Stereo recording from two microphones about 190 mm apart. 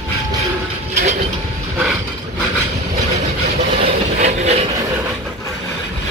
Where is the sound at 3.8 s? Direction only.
35° right (ahead or behind).